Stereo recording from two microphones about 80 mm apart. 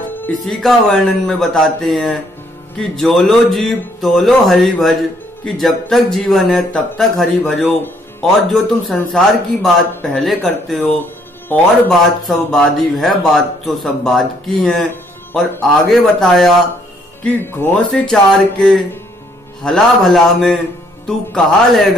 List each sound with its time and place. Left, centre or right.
0.3 s a man's voice: centre
11.4 s a man's voice: left
11.9 s a man's voice: centre
15.9 s a man's voice: centre
17.7 s a man's voice: centre